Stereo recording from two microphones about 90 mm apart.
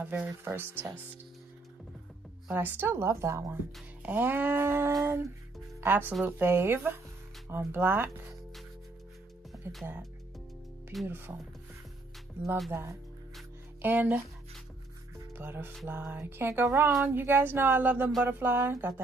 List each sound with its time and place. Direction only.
0.0 s speech: 20° right (ahead or behind)
2.5 s speech: 20° right (ahead or behind)
4.0 s speech: 20° right (ahead or behind)
9.6 s speech: 30° right (ahead or behind)
11.1 s speech: 25° right (ahead or behind)
13.8 s speech: 20° right (ahead or behind)
15.1 s music: 25° right (ahead or behind)
15.9 s speech: 20° right (ahead or behind)